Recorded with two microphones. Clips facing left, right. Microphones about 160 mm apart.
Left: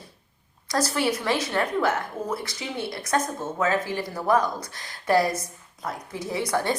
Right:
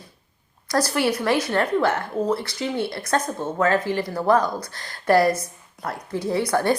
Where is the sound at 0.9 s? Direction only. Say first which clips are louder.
Right 5 dB; 60° right (ahead or behind).